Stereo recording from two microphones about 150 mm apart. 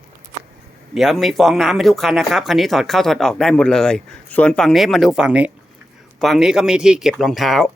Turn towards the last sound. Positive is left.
turn(degrees=0)  # may be behind; listen again after turning